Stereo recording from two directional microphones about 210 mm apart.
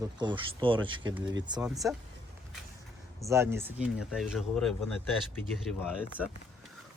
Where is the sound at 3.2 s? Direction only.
15° right (ahead or behind).